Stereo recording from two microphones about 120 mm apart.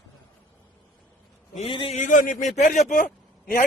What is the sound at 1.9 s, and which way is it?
A man's voice, 90° left.